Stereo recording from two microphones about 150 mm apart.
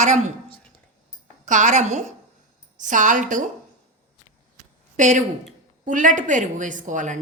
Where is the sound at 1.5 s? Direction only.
55° right (ahead or behind).